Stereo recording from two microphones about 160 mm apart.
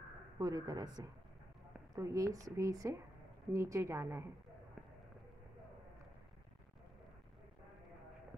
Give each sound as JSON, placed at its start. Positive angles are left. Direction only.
{"t": 0.4, "sound": "a woman's voice", "side_deg": -25}